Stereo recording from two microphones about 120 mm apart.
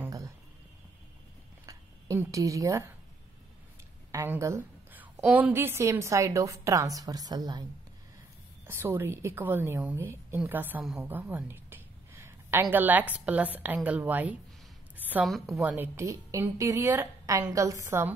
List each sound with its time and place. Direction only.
1.7 s speech: 25° right (ahead or behind)
4.1 s a sound: 20° right (ahead or behind)
5.2 s a woman's voice: 15° right (ahead or behind); by 7.6 s 35° right (ahead or behind)
8.6 s a woman's voice: 20° right (ahead or behind)
11.0 s a sound: 15° right (ahead or behind)
12.7 s a woman's voice: 15° right (ahead or behind)
15.0 s a sound: 15° right (ahead or behind)
15.2 s a woman's voice: centre (ahead or behind)
15.6 s a woman's voice: 15° right (ahead or behind)
16.0 s a woman's voice: 25° right (ahead or behind)